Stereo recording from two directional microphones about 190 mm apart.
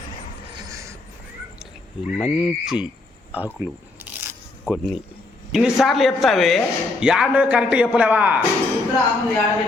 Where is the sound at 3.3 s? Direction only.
10° right (ahead or behind).